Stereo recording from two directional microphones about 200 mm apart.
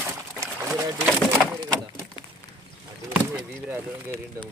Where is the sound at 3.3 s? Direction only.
10° right (ahead or behind).